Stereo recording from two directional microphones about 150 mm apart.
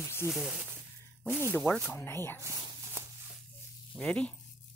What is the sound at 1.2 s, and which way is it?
Speech, 15° right (ahead or behind).